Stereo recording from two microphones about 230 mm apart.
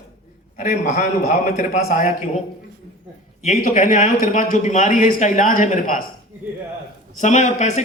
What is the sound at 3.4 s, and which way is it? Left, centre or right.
A woman's voice, left.